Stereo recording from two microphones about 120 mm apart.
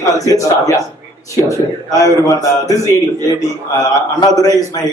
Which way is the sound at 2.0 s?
30° left (ahead or behind).